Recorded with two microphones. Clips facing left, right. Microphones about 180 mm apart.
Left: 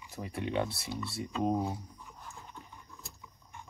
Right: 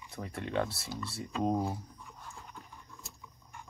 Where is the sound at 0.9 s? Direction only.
Centre (ahead or behind).